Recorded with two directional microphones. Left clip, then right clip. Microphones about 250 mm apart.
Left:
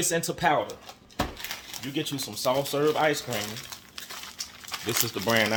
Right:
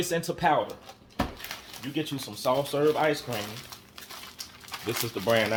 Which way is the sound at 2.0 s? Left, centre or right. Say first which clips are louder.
Left 1 dB; centre.